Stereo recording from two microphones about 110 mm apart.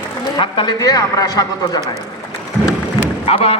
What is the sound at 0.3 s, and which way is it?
A man's voice, 45° left (ahead or behind).